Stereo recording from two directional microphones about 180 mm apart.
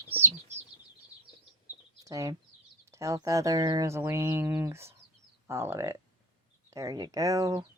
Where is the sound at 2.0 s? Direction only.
20° right (ahead or behind).